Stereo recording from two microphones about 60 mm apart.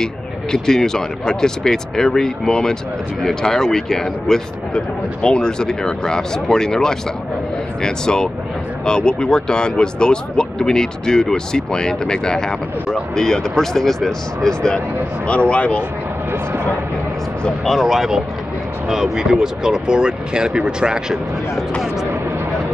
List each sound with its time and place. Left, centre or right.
0.0 s speech: centre
15.2 s speech: left
17.6 s speech: centre